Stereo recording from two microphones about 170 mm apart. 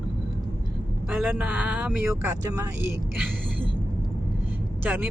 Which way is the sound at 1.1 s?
10° right (ahead or behind).